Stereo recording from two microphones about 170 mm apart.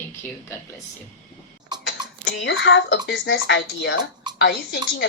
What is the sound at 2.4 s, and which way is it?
Speech, 90° left.